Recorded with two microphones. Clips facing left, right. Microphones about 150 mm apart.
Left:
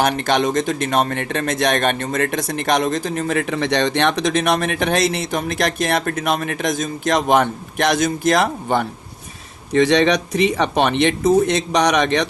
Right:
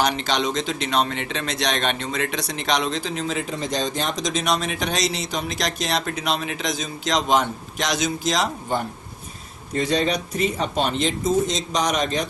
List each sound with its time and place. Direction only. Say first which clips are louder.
0.0 s speech: left 5 dB; 55° left (ahead or behind)
9.7 s speech: left 7 dB; 90° left; by 12.3 s 75° left (ahead or behind)